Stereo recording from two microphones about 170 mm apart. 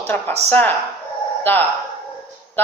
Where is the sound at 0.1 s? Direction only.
10° left (ahead or behind).